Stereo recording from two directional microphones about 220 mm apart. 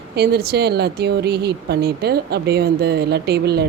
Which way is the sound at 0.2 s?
45° right (ahead or behind).